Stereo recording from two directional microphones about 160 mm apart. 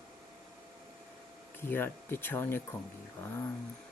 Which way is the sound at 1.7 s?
15° left (ahead or behind).